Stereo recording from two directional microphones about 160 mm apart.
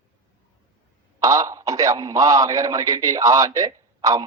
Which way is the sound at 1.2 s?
20° right (ahead or behind).